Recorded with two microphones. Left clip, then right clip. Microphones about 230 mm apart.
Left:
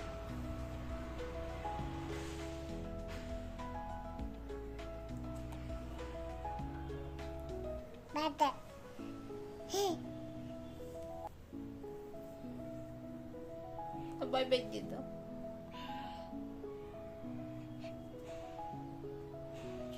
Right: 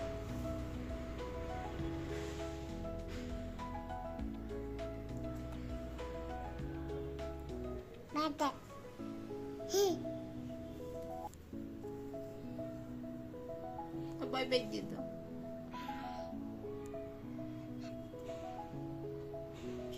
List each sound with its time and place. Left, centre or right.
8.1 s a child's voice: centre
9.7 s a child's voice: centre
14.2 s music: left